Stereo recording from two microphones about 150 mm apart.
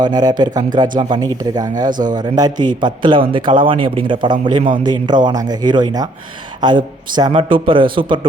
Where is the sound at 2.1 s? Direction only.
25° right (ahead or behind).